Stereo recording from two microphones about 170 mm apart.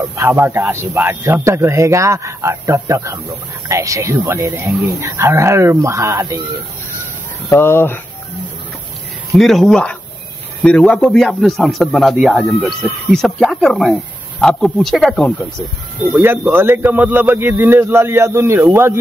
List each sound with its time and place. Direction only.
0.1 s a man's voice: 15° right (ahead or behind)
7.5 s speech: 15° left (ahead or behind)
9.4 s speech: centre (ahead or behind)
16.0 s a man's voice: 10° right (ahead or behind)